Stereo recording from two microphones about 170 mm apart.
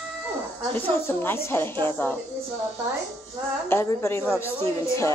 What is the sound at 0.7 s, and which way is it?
A woman's voice, 10° left (ahead or behind).